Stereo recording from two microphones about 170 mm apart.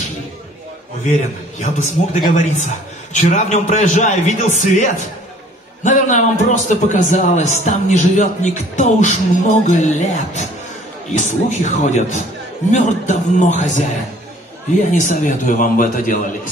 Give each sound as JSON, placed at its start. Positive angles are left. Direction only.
{"t": 1.6, "sound": "a man's voice", "side_deg": 45}
{"t": 14.9, "sound": "a man's voice", "side_deg": 45}